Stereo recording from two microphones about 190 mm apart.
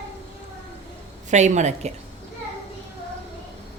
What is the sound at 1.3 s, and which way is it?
Speech, 40° right (ahead or behind).